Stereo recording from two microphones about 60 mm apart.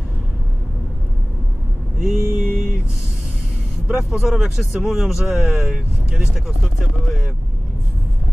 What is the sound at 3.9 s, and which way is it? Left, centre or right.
Speech, centre.